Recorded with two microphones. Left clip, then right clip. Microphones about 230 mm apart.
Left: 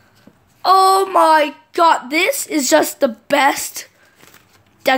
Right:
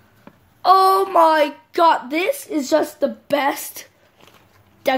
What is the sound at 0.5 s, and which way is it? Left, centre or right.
A woman's voice, centre.